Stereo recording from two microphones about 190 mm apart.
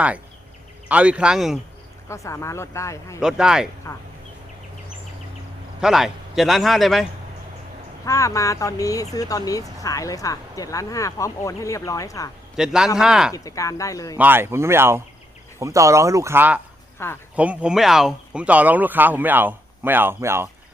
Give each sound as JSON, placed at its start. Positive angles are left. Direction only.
{"t": 0.9, "sound": "a man's voice", "side_deg": -5}
{"t": 2.0, "sound": "speech", "side_deg": 15}
{"t": 3.2, "sound": "a man's voice", "side_deg": -5}
{"t": 5.8, "sound": "a man's voice", "side_deg": 0}
{"t": 8.0, "sound": "speech", "side_deg": 15}
{"t": 12.5, "sound": "a man's voice", "side_deg": -5}
{"t": 13.3, "sound": "speech", "side_deg": 15}
{"t": 14.2, "sound": "speech", "side_deg": -10}
{"t": 17.0, "sound": "speech", "side_deg": 15}
{"t": 17.3, "sound": "speech", "side_deg": -5}